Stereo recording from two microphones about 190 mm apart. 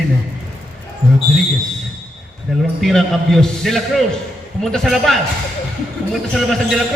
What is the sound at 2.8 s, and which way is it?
A man's voice, centre (ahead or behind).